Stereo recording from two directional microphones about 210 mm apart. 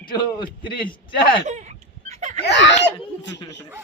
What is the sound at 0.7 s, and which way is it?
Speech, 25° left (ahead or behind).